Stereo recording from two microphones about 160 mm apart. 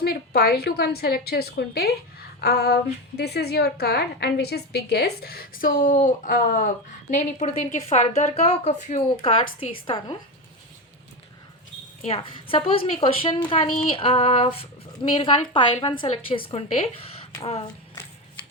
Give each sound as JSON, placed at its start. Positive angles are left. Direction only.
{"t": 0.0, "sound": "a woman's voice", "side_deg": 75}
{"t": 2.4, "sound": "a sound", "side_deg": 90}
{"t": 3.2, "sound": "a woman's voice", "side_deg": 90}
{"t": 7.1, "sound": "a woman's voice", "side_deg": 45}
{"t": 12.0, "sound": "a woman's voice", "side_deg": 35}